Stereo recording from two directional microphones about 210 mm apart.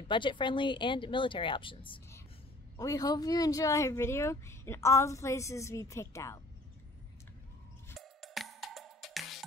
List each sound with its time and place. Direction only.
0.1 s speech: 25° left (ahead or behind)
8.0 s music: centre (ahead or behind)